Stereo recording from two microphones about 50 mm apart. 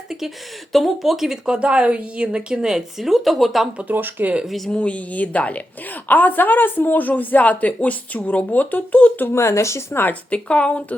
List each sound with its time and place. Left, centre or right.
0.7 s speech: centre
1.5 s a woman's voice: right; by 3.7 s centre
3.9 s speech: right
4.4 s speech: centre
4.7 s a woman's voice: left
9.3 s speech: left
9.9 s speech: left
10.2 s a woman's voice: left